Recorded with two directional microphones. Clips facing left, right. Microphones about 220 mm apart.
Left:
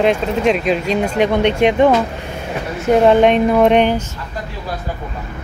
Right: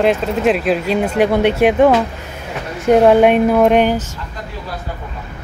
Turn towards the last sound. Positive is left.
turn(degrees=-5)  # may be behind; listen again after turning